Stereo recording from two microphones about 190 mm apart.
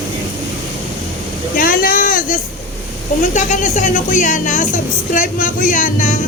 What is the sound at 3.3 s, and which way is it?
Speech, 40° left (ahead or behind).